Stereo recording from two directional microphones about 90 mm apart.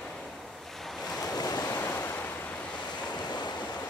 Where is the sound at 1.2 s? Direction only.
45° left (ahead or behind).